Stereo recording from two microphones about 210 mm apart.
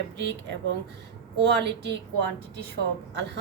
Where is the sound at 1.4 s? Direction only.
55° right (ahead or behind).